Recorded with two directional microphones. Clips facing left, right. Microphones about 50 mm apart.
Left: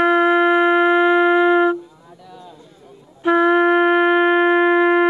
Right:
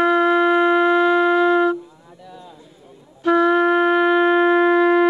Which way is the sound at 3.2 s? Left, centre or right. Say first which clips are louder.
Left 1 dB; centre.